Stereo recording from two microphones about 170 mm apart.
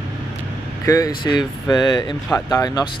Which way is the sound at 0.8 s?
20° left (ahead or behind).